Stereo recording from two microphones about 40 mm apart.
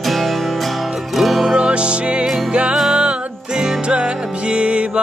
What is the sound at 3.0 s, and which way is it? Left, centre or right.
Music, right.